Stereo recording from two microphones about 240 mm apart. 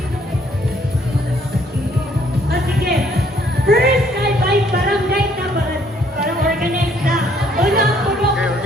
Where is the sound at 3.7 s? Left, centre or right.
Right.